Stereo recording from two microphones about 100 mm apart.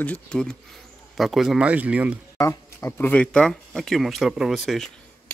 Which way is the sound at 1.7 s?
15° right (ahead or behind).